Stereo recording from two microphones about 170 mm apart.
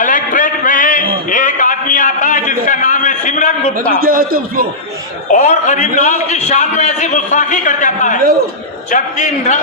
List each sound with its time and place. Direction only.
0.0 s a sound: 50° left (ahead or behind)
3.9 s a man's voice: 60° right (ahead or behind)
5.3 s a man's voice: 45° left (ahead or behind)